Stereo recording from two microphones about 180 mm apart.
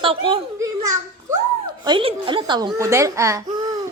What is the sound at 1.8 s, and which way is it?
A man's voice, 30° right (ahead or behind).